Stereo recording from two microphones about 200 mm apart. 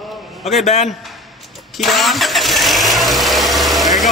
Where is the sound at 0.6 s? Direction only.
35° left (ahead or behind).